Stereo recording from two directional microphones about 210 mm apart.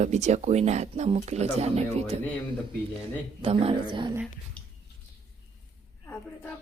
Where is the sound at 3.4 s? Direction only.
25° right (ahead or behind).